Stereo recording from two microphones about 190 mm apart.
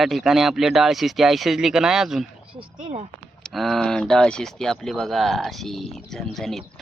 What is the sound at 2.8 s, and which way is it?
Speech, 35° right (ahead or behind).